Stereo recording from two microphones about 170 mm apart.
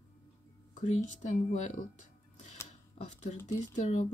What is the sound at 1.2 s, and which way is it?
Speech, 45° left (ahead or behind).